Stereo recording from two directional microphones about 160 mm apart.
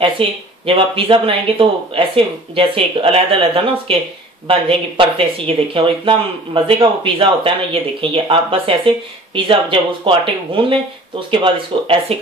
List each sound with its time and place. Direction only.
0.0 s speech: 35° right (ahead or behind)